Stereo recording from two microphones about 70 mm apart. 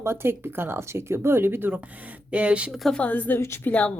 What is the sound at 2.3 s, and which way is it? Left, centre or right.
Speech, centre.